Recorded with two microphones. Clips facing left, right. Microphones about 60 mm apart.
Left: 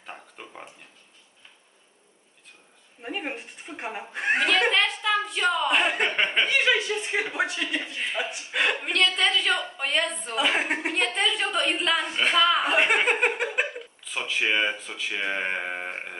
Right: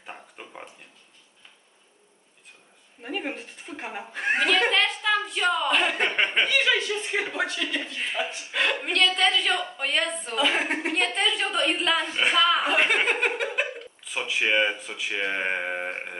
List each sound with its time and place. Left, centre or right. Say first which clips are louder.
0.0 s a sound: even; centre
3.0 s speech: right 1 dB; centre
4.6 s a sound: even; centre
5.7 s speech: even; centre
6.0 s speech: even; centre
6.6 s speech: left 1 dB; left
8.8 s speech: right 1 dB; centre
10.3 s speech: even; centre
14.0 s speech: right 1 dB; centre